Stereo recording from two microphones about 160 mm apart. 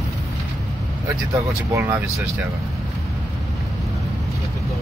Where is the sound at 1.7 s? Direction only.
15° right (ahead or behind).